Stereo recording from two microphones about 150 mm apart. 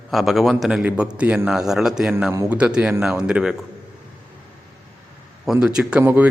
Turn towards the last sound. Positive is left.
turn(degrees=-15)  # may be behind; listen again after turning